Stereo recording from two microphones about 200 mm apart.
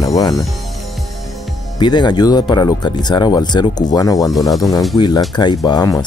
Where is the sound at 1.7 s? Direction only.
20° left (ahead or behind).